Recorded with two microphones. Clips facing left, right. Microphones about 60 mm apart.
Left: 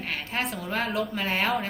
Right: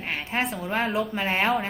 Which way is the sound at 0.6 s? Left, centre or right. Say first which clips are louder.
Right 2 dB; centre.